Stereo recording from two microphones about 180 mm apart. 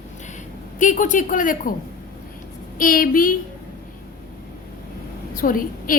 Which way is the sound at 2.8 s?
50° left (ahead or behind).